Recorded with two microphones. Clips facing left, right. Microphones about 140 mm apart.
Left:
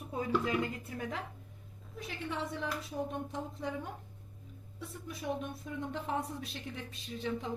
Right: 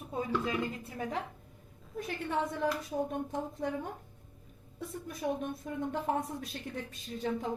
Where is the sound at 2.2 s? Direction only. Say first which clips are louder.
Right 5 dB; 50° right (ahead or behind).